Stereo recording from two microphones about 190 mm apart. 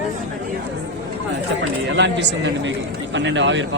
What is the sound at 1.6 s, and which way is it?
Speech, 70° right (ahead or behind).